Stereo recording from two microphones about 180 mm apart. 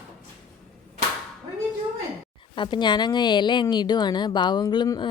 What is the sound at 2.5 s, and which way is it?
A woman's voice, 25° left (ahead or behind).